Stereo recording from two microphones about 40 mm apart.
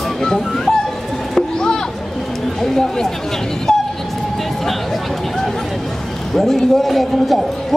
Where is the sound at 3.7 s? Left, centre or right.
Centre.